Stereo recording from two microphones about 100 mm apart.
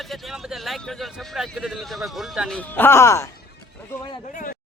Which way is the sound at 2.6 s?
20° left (ahead or behind).